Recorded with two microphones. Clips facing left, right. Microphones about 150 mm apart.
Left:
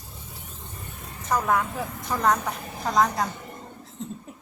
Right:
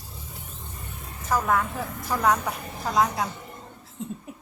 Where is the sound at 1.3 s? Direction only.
Centre (ahead or behind).